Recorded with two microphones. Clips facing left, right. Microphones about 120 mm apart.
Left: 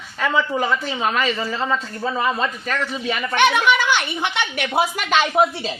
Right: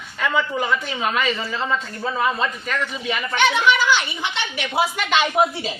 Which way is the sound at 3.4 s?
55° left (ahead or behind).